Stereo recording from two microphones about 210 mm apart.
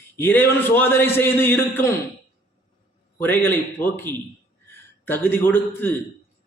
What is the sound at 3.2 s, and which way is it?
A man's voice, 10° left (ahead or behind).